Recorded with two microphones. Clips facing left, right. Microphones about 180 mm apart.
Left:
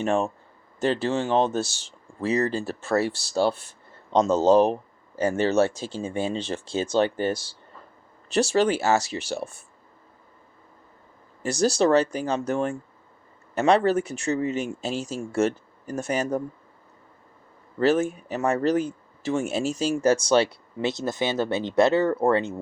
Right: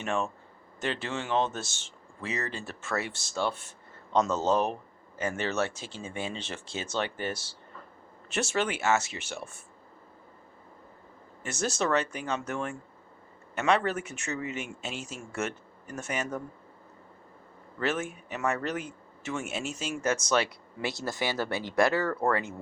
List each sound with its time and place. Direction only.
0.0 s speech: 35° left (ahead or behind)
11.4 s speech: 35° left (ahead or behind)
17.7 s speech: 35° left (ahead or behind)